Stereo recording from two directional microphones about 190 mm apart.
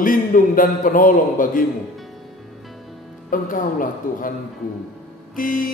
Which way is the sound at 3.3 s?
45° left (ahead or behind).